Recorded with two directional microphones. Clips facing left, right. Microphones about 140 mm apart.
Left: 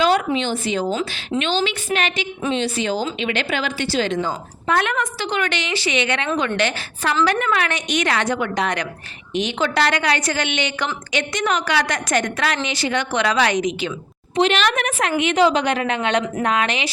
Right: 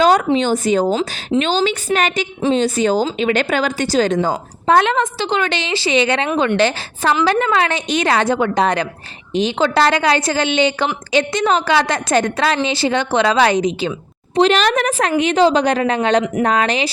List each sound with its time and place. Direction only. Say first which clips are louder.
0.3 s a woman's voice: right 6 dB; 45° right (ahead or behind)